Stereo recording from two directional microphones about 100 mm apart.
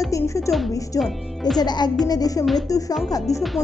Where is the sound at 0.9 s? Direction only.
5° left (ahead or behind).